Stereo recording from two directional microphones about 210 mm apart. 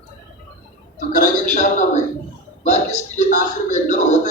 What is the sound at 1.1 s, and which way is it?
A man's voice, 35° left (ahead or behind).